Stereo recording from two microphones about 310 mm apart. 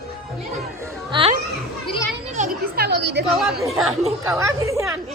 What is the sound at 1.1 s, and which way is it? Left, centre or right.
Children playing, centre.